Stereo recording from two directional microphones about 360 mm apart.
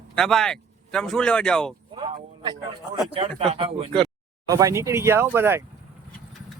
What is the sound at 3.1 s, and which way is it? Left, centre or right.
Speech, centre.